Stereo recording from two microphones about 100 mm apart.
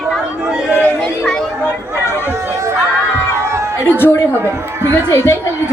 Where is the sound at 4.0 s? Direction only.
25° left (ahead or behind).